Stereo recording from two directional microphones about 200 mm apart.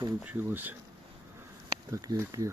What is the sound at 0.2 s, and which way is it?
Speech, 10° right (ahead or behind).